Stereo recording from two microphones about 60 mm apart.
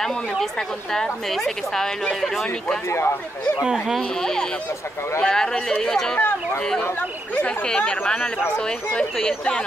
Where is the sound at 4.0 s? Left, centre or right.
Centre.